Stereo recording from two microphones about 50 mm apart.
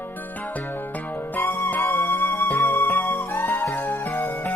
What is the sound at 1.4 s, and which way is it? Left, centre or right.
Music, left.